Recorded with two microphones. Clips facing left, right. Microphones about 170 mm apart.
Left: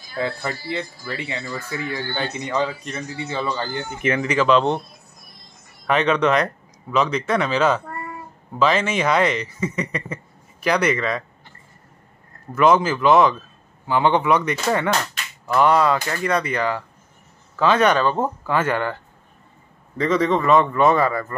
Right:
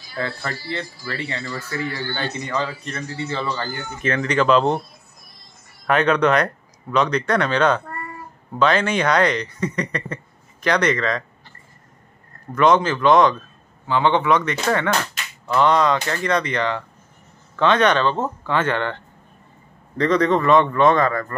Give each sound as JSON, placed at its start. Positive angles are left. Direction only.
{"t": 0.2, "sound": "speech", "side_deg": 15}
{"t": 5.9, "sound": "a man's voice", "side_deg": 0}
{"t": 12.5, "sound": "speech", "side_deg": 5}